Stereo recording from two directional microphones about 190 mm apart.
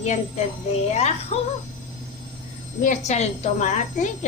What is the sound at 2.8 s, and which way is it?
A woman's voice, 35° left (ahead or behind).